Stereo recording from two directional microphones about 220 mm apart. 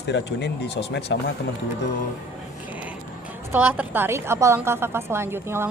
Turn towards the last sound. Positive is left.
turn(degrees=-10)  # may be behind; listen again after turning